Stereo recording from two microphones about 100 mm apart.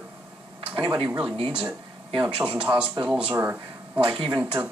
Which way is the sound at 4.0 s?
60° right (ahead or behind).